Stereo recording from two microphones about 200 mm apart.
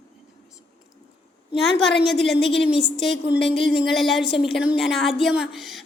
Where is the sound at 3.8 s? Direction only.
Centre (ahead or behind).